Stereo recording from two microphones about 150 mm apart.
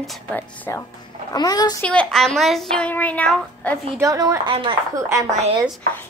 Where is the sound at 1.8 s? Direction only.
5° left (ahead or behind).